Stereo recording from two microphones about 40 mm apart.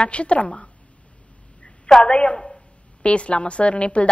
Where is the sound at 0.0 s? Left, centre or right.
Left.